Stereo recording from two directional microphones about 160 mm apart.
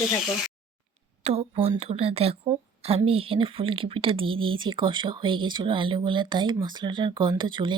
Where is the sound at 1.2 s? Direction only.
40° right (ahead or behind).